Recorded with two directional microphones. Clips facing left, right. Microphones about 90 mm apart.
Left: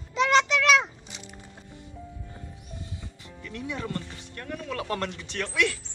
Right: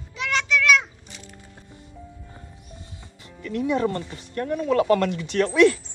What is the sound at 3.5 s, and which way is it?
A man's voice, 50° right (ahead or behind).